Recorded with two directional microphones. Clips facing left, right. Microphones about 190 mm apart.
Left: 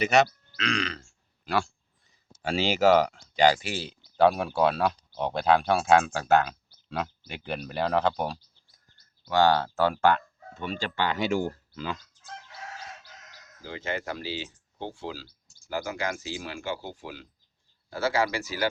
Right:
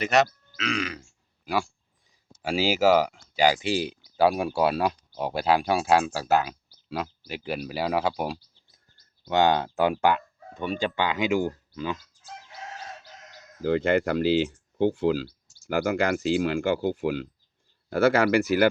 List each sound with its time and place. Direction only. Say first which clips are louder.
0.0 s speech: even; centre (ahead or behind)
9.2 s speech: even; 20° right (ahead or behind)
13.6 s speech: right 11 dB; 60° right (ahead or behind)